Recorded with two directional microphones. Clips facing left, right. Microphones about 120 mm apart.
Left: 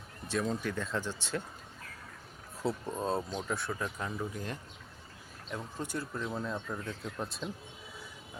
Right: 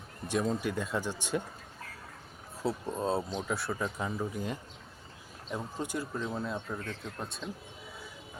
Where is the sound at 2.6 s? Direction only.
5° right (ahead or behind).